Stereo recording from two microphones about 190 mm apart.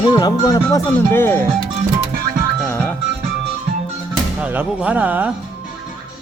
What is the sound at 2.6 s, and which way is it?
Music, 10° left (ahead or behind).